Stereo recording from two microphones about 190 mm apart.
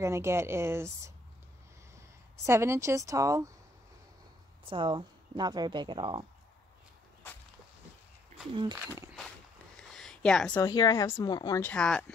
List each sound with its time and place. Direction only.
0.0 s speech: 15° right (ahead or behind)
4.6 s speech: 25° right (ahead or behind)
8.7 s speech: 15° right (ahead or behind)
9.8 s a sound: 5° left (ahead or behind)
10.5 s speech: 20° left (ahead or behind)
11.7 s speech: 5° left (ahead or behind)